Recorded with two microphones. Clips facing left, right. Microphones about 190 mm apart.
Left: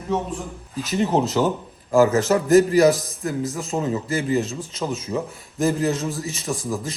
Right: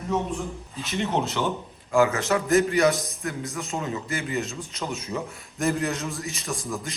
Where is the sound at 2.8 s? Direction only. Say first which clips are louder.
Left 5 dB; centre (ahead or behind).